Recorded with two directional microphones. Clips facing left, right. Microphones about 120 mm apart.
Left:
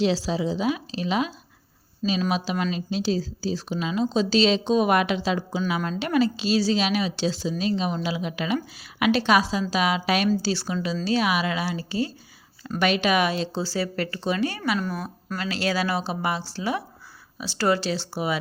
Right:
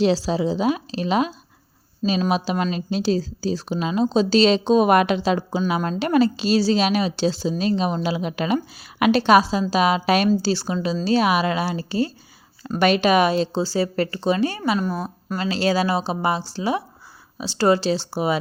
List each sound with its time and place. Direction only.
0.0 s a woman's voice: 45° right (ahead or behind)